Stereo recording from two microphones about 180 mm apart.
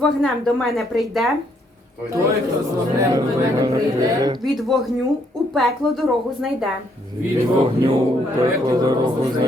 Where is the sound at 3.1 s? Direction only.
20° right (ahead or behind).